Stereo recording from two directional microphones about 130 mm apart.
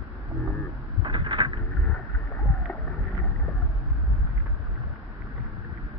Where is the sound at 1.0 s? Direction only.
40° right (ahead or behind).